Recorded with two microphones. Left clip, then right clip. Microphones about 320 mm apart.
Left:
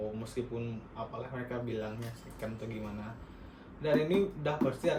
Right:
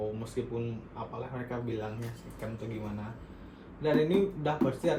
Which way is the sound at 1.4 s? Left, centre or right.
Centre.